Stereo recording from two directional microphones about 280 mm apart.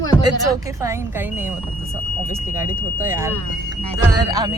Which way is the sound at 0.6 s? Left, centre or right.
Centre.